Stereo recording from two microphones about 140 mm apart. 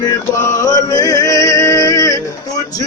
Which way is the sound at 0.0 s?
20° left (ahead or behind).